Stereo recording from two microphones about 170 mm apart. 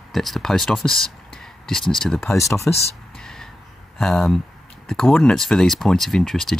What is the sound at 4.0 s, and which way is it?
Speech, centre (ahead or behind).